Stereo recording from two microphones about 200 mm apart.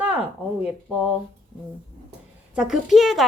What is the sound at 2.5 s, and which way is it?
Speech, 5° right (ahead or behind).